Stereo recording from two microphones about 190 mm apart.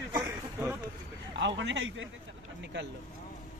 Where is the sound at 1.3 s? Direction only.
75° right (ahead or behind).